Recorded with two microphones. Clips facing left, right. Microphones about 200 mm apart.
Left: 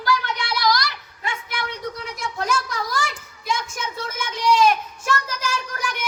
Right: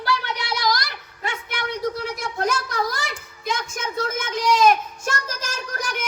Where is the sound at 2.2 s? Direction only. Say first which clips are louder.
Right 1 dB; 60° right (ahead or behind).